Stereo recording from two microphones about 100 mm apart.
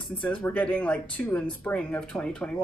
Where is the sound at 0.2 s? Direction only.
15° left (ahead or behind).